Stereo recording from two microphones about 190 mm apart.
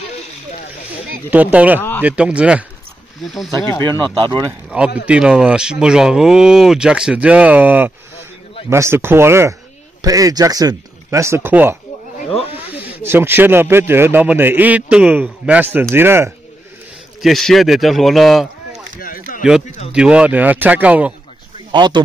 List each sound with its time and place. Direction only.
1.3 s speech: 5° right (ahead or behind)
1.8 s a man's voice: 10° left (ahead or behind)
2.0 s speech: 5° right (ahead or behind)
3.8 s speech: 25° right (ahead or behind)
4.6 s speech: 5° right (ahead or behind)
12.2 s snake: 30° left (ahead or behind)
12.5 s speech: 10° right (ahead or behind)
17.2 s speech: centre (ahead or behind)
18.9 s a sound: 50° left (ahead or behind)
19.9 s speech: 5° right (ahead or behind)
21.7 s speech: 25° right (ahead or behind)